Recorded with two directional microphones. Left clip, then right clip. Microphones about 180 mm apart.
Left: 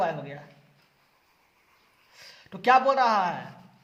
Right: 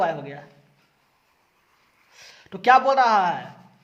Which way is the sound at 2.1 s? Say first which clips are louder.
Right 5 dB; 25° right (ahead or behind).